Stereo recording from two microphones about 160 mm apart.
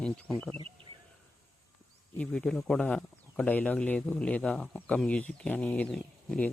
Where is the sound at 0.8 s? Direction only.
35° right (ahead or behind).